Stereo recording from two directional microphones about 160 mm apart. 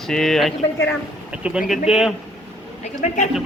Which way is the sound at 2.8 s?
50° left (ahead or behind).